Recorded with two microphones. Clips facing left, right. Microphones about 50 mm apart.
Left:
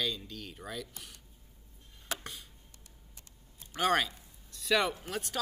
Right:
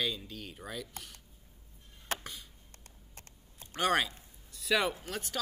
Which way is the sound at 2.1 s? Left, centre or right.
Right.